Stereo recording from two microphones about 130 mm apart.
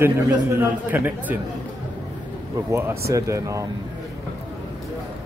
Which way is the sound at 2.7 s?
25° right (ahead or behind).